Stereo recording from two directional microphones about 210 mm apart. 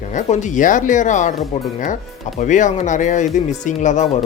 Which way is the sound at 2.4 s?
35° left (ahead or behind).